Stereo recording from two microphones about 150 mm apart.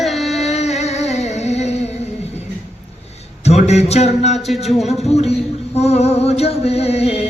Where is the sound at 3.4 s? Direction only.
45° left (ahead or behind).